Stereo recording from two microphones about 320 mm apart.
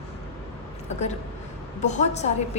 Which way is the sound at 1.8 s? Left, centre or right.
Left.